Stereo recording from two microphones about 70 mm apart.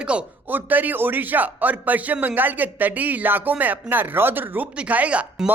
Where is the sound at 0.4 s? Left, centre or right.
Right.